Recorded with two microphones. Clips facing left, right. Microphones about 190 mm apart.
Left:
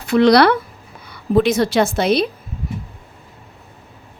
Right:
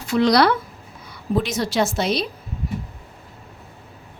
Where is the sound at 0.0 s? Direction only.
60° left (ahead or behind).